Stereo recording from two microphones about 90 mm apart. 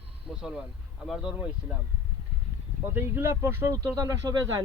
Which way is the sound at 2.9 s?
25° right (ahead or behind).